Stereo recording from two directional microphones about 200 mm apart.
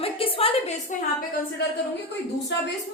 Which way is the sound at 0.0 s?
30° left (ahead or behind).